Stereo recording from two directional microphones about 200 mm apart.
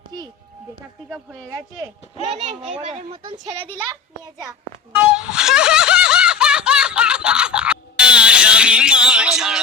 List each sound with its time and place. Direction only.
1.1 s speech: 5° right (ahead or behind)
2.2 s speech: 35° right (ahead or behind)
4.9 s snicker: 5° right (ahead or behind)